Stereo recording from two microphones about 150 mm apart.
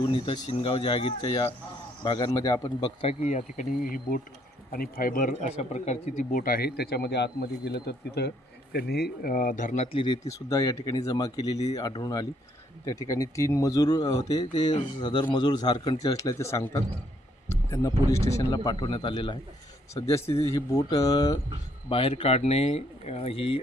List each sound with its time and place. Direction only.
0.1 s speech: 35° left (ahead or behind)
3.1 s insect: 50° left (ahead or behind); by 4.2 s 70° left (ahead or behind)
4.7 s speech: 80° left
5.5 s speech: 50° left (ahead or behind)
6.4 s speech: 80° left; by 10.0 s 50° left (ahead or behind)
10.3 s speech: 20° left (ahead or behind)
20.1 s speech: 20° left (ahead or behind)
21.8 s speech: 35° left (ahead or behind)